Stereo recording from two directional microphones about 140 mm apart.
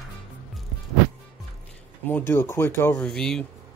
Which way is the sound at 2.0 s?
15° left (ahead or behind).